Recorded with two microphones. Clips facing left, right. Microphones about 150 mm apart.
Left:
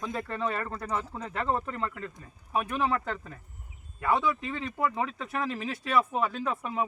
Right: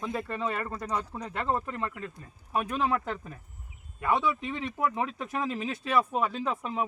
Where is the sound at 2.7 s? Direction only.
15° right (ahead or behind).